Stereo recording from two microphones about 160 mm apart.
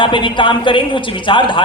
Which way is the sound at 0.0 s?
30° left (ahead or behind).